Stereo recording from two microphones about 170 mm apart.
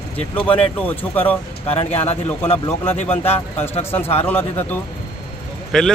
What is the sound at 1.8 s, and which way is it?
Speech, 40° left (ahead or behind).